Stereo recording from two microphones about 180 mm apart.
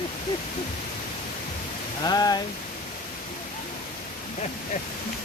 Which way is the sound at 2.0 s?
20° left (ahead or behind).